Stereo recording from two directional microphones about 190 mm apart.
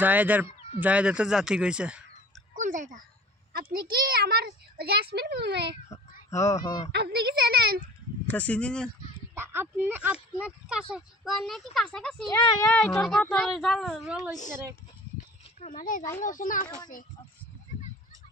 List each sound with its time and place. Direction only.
0.0 s speech: 10° right (ahead or behind)
2.5 s a sound: 40° right (ahead or behind)
3.7 s a child's voice: 50° right (ahead or behind)
6.3 s speech: 15° left (ahead or behind)
6.9 s speech: 60° right (ahead or behind)
8.3 s speech: 5° left (ahead or behind)
9.3 s speech: 10° right (ahead or behind); by 12.3 s 5° left (ahead or behind)
12.3 s speech: 15° left (ahead or behind)
12.7 s speech: 5° left (ahead or behind)
16.2 s speech: 45° left (ahead or behind)